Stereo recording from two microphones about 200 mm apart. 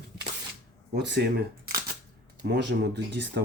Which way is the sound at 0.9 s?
60° right (ahead or behind).